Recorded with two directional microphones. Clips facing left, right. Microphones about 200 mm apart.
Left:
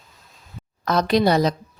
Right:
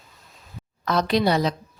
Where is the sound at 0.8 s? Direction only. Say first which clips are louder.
Left 3 dB; 45° left (ahead or behind).